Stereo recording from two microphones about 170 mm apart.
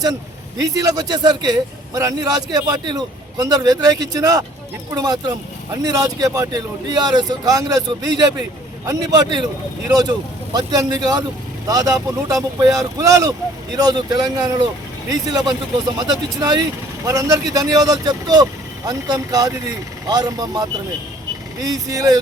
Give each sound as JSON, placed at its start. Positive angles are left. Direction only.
{"t": 0.6, "sound": "a man's voice", "side_deg": -20}